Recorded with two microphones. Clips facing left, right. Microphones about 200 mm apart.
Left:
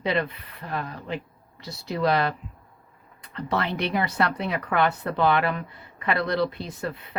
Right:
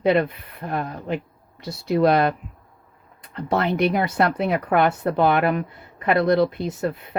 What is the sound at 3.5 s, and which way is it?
Speech, 50° right (ahead or behind).